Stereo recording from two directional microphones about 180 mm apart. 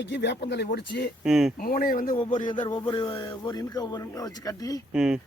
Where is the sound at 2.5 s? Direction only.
25° left (ahead or behind).